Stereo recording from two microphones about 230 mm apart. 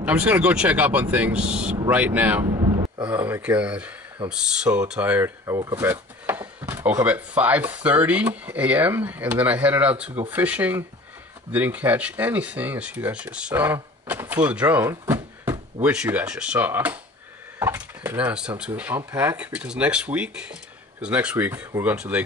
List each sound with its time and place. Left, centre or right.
0.0 s speech: centre
2.4 s a sound: centre
3.1 s speech: centre